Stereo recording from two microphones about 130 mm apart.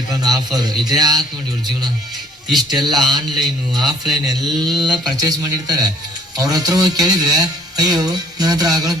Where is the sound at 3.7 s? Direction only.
30° right (ahead or behind).